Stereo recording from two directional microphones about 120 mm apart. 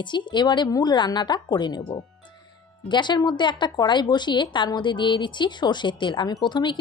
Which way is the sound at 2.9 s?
40° left (ahead or behind).